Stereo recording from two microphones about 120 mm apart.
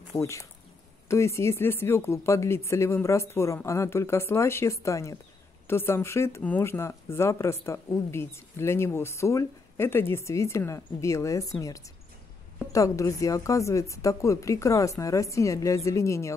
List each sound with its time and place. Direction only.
0.1 s speech: 25° left (ahead or behind)